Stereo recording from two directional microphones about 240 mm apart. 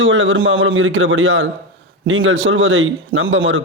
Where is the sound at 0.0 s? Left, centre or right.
Right.